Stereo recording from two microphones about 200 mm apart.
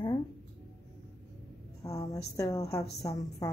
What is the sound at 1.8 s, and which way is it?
A woman's voice, 15° left (ahead or behind).